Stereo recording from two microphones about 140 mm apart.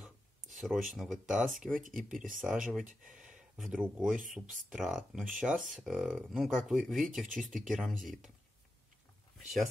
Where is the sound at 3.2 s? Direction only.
5° right (ahead or behind).